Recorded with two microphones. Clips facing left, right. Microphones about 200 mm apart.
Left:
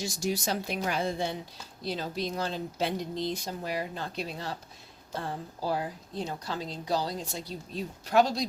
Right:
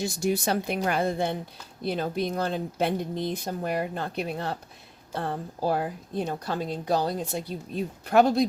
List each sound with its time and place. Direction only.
0.0 s speech: 55° right (ahead or behind)